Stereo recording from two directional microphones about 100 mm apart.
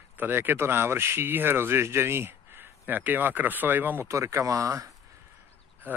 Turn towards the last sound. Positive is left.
turn(degrees=-30)  # may be behind; listen again after turning